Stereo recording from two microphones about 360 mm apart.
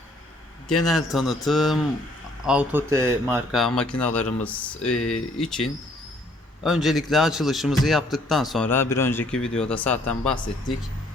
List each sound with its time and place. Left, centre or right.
0.7 s a man's voice: centre
4.9 s speech: centre
5.4 s a man's voice: centre